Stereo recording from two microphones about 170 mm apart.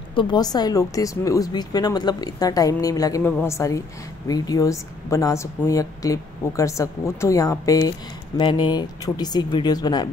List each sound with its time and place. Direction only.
0.1 s a woman's voice: 25° left (ahead or behind)